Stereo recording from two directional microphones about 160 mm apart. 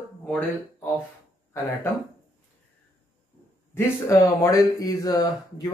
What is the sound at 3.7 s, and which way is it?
Speech, 15° left (ahead or behind).